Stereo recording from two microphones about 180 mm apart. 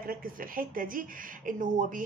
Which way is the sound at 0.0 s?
50° right (ahead or behind).